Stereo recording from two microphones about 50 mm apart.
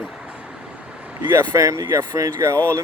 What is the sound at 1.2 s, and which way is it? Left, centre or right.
Speech, right.